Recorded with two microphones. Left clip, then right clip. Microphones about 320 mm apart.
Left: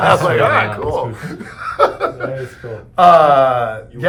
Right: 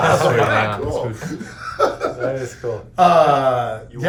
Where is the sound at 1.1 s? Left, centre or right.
Centre.